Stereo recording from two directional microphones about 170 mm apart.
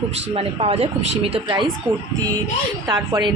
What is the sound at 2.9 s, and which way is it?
Speech, 25° right (ahead or behind).